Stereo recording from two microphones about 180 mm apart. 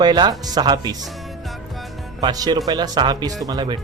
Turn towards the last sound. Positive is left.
turn(degrees=-25)  # may be behind; listen again after turning